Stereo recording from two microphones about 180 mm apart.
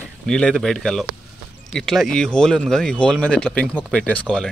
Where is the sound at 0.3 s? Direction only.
5° left (ahead or behind).